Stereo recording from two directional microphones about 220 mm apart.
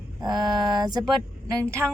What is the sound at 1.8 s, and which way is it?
Speech, 10° right (ahead or behind).